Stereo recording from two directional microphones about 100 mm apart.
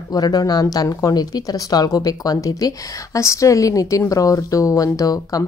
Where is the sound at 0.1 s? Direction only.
40° left (ahead or behind).